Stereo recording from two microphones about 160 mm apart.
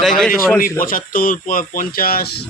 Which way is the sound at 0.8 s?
60° left (ahead or behind).